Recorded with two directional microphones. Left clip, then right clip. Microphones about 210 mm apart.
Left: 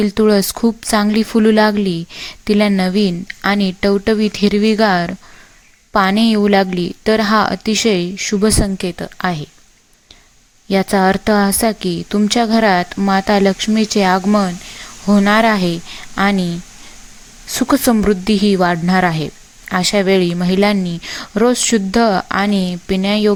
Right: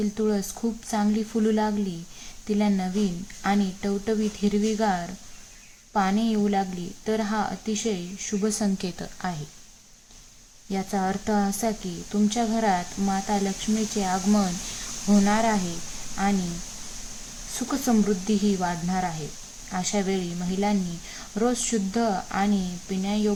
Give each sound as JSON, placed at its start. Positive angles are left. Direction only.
{"t": 0.0, "sound": "a woman's voice", "side_deg": 40}
{"t": 10.7, "sound": "a woman's voice", "side_deg": 40}
{"t": 17.5, "sound": "a woman's voice", "side_deg": 40}